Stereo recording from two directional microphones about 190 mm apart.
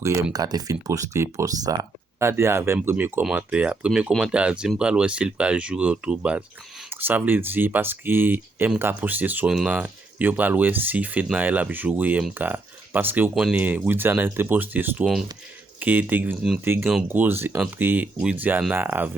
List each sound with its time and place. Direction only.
0.3 s speech: 20° right (ahead or behind)